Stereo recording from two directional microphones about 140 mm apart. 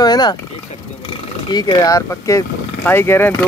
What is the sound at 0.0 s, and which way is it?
Frog, 30° left (ahead or behind).